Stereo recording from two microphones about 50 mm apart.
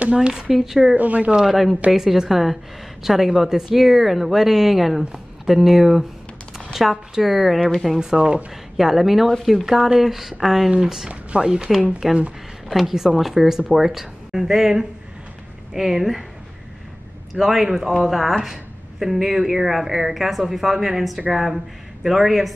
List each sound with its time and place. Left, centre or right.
0.0 s speech: right
0.3 s speech: centre
0.9 s speech: right
1.4 s speech: centre
8.2 s speech: right
8.7 s speech: centre
9.7 s speech: centre
9.9 s speech: centre
17.4 s speech: centre